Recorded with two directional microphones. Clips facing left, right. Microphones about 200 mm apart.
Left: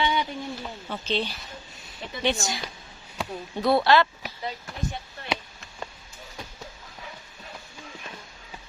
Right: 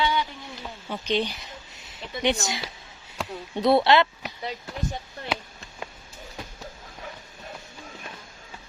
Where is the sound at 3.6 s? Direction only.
20° right (ahead or behind).